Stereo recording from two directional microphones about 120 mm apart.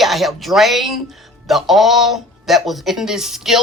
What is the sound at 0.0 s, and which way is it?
Speech, centre (ahead or behind).